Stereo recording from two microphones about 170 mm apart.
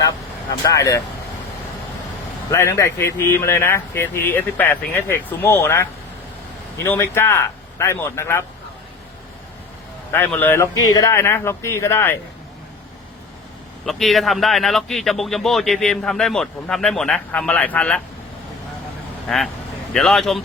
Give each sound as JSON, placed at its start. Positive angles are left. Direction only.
{"t": 0.6, "sound": "speech", "side_deg": 20}
{"t": 2.5, "sound": "speech", "side_deg": 15}
{"t": 10.1, "sound": "speech", "side_deg": 10}
{"t": 13.8, "sound": "a man's voice", "side_deg": 0}
{"t": 19.3, "sound": "a man's voice", "side_deg": 5}